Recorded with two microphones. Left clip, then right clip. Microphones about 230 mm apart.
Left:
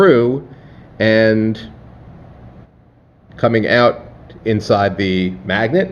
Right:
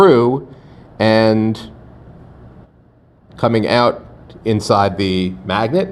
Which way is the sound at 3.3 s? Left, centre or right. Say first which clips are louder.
Left 1 dB; right.